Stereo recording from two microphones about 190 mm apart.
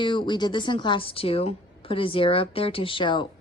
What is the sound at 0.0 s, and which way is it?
A woman's voice, 25° left (ahead or behind).